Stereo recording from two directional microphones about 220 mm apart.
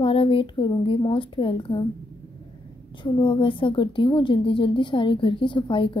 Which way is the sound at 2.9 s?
20° left (ahead or behind).